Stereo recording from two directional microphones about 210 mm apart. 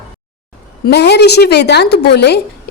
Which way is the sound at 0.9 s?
50° left (ahead or behind).